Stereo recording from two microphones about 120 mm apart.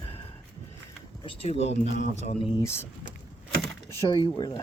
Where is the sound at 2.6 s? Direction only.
20° left (ahead or behind).